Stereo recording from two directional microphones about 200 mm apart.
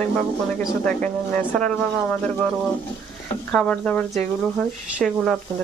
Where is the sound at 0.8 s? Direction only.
5° left (ahead or behind).